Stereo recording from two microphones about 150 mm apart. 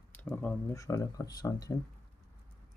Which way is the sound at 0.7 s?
20° left (ahead or behind).